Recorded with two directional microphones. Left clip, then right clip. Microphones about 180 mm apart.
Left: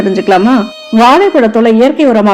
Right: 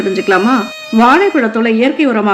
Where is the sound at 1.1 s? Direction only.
40° left (ahead or behind).